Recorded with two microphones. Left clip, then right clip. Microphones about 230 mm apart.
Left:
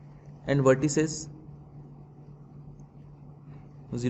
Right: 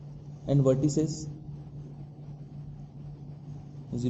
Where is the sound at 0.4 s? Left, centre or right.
Left.